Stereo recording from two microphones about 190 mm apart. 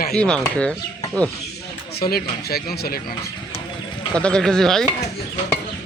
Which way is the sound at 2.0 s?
55° left (ahead or behind).